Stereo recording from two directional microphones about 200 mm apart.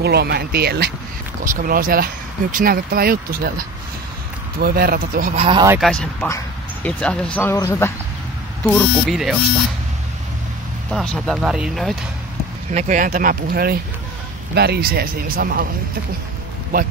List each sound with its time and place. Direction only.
0.0 s speech: 55° right (ahead or behind)
5.3 s speech: 25° right (ahead or behind)
5.8 s speech: 5° left (ahead or behind)
6.2 s a sound: 15° left (ahead or behind)
7.0 s speech: 5° left (ahead or behind)
10.9 s speech: centre (ahead or behind)
12.7 s speech: 40° right (ahead or behind)
16.7 s speech: 45° right (ahead or behind)